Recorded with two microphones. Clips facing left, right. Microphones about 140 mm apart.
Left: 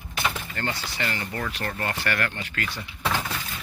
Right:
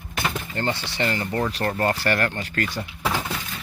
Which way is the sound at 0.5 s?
30° right (ahead or behind).